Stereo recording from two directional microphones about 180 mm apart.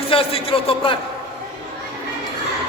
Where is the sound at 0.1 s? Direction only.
30° left (ahead or behind).